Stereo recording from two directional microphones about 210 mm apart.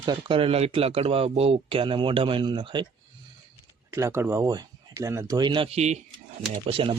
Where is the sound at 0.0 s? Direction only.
20° right (ahead or behind).